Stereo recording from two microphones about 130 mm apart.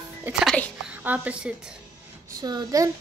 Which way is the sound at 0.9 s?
10° right (ahead or behind).